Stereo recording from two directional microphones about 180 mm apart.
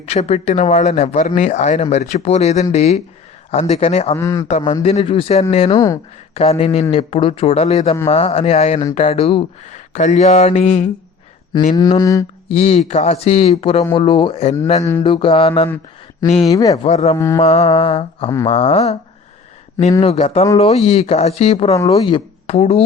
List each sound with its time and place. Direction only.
0.0 s speech: 35° left (ahead or behind)
4.1 s a man's voice: 15° left (ahead or behind)
4.4 s speech: 40° left (ahead or behind)
5.7 s speech: 20° left (ahead or behind)
6.3 s speech: 35° left (ahead or behind)
11.7 s speech: 20° left (ahead or behind)
12.5 s speech: 35° left (ahead or behind)
14.8 s a man's voice: 15° left (ahead or behind)
15.0 s speech: 30° left (ahead or behind)
16.5 s speech: 20° left (ahead or behind)
16.7 s speech: 35° left (ahead or behind)
17.2 s a man's voice: 15° left (ahead or behind)
17.4 s speech: 35° left (ahead or behind)
20.0 s speech: 35° left (ahead or behind)